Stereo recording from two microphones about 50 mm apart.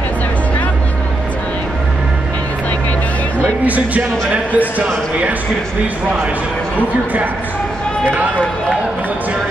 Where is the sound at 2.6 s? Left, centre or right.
Left.